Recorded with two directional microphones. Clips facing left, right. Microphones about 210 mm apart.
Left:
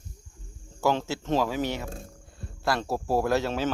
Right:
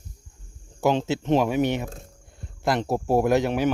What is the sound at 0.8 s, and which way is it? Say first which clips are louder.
Speech: right 4 dB; 20° right (ahead or behind).